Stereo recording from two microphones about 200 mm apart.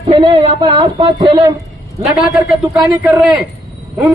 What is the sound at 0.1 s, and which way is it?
Speech, 25° right (ahead or behind).